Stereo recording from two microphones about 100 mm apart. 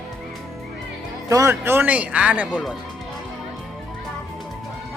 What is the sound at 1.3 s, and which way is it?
Speech, 30° right (ahead or behind).